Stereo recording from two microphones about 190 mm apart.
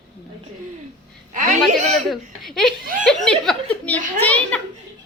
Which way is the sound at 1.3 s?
40° right (ahead or behind).